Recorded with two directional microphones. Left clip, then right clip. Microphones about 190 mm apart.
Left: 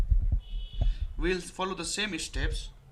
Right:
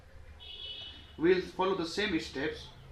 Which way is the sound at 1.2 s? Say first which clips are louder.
Right 3 dB; 45° left (ahead or behind).